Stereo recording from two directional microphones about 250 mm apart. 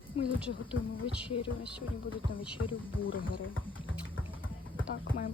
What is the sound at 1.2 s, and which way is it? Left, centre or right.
Speech, centre.